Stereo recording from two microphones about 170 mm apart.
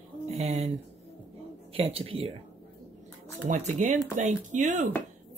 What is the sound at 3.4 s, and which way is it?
Speech, 45° right (ahead or behind).